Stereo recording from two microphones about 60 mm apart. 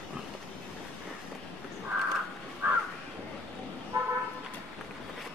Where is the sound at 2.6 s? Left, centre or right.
Right.